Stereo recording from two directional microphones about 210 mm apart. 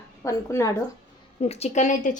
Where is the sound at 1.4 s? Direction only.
30° left (ahead or behind).